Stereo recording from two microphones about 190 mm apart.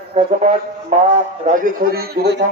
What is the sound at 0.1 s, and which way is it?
Music, 30° right (ahead or behind).